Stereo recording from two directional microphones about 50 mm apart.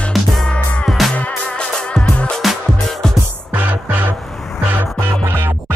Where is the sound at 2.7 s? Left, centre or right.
Centre.